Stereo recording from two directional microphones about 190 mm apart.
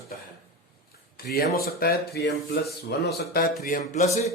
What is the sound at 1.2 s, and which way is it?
Speech, 50° left (ahead or behind).